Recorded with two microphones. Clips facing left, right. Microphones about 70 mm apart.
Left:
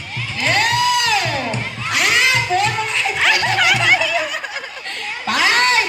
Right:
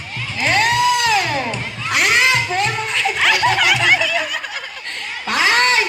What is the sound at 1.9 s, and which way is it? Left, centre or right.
Children shouting, right.